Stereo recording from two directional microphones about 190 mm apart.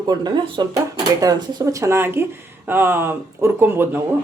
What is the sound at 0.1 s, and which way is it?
Speech, 25° right (ahead or behind).